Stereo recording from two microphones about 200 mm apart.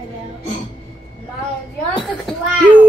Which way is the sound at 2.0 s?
5° right (ahead or behind).